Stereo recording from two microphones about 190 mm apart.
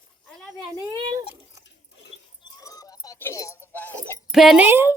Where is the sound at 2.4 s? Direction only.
20° left (ahead or behind).